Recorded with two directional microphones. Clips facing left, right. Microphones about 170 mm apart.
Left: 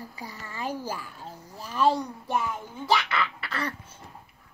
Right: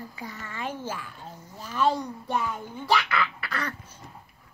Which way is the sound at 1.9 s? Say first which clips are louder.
Left 1 dB; 5° left (ahead or behind).